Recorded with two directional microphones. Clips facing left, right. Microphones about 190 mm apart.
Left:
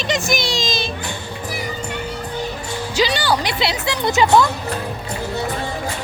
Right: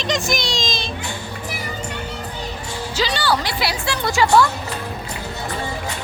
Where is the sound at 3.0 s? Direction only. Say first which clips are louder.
Left 2 dB; 15° left (ahead or behind).